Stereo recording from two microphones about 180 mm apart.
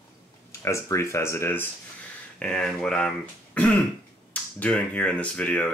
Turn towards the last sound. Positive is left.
turn(degrees=5)  # may be behind; listen again after turning